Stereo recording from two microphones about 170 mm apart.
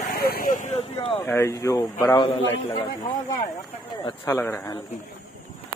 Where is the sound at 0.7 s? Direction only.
35° left (ahead or behind).